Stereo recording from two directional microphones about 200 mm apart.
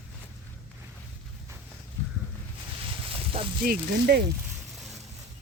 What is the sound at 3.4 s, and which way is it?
Speech, 30° right (ahead or behind).